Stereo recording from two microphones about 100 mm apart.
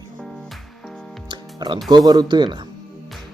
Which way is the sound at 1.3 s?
50° right (ahead or behind).